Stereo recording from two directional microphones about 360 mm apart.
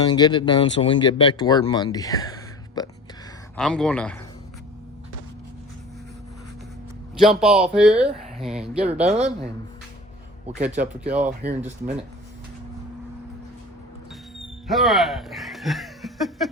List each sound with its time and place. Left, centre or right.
0.0 s speech: centre
7.2 s speech: centre
9.0 s speech: centre
11.0 s speech: centre
14.7 s speech: centre